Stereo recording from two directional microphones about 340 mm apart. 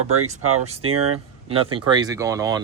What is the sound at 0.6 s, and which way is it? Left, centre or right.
A man's voice, centre.